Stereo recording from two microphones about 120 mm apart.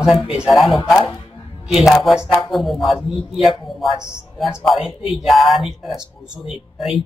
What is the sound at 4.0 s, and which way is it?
Speech, 25° left (ahead or behind).